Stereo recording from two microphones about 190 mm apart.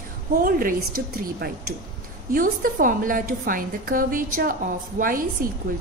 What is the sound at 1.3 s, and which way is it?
A woman's voice, 50° right (ahead or behind).